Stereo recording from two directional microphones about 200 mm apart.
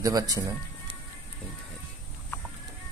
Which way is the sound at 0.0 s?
20° right (ahead or behind).